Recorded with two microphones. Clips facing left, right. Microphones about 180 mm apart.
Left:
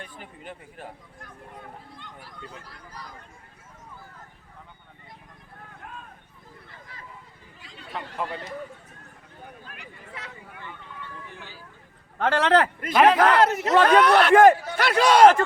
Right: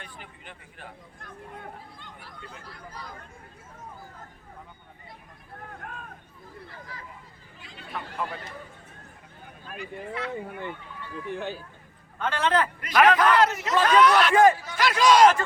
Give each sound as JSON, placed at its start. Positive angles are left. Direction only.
{"t": 0.0, "sound": "speech", "side_deg": 45}
{"t": 2.2, "sound": "speech", "side_deg": 10}
{"t": 5.8, "sound": "a sound", "side_deg": -55}
{"t": 12.2, "sound": "a man's voice", "side_deg": 70}
{"t": 12.9, "sound": "speech", "side_deg": 25}
{"t": 13.1, "sound": "speech", "side_deg": 55}